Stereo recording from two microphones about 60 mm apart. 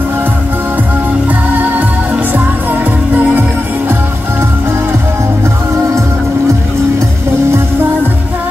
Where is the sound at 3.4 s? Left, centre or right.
Right.